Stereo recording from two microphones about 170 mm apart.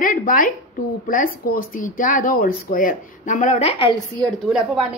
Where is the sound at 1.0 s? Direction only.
55° left (ahead or behind); by 3.9 s 35° left (ahead or behind).